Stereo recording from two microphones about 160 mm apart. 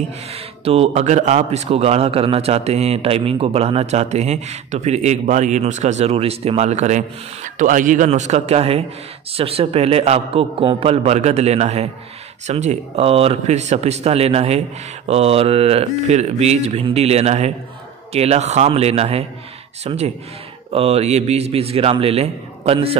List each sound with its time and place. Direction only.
0.3 s a man's voice: 40° right (ahead or behind)